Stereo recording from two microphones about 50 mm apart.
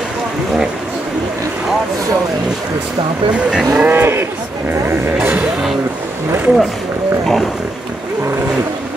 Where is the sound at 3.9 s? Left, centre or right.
Right.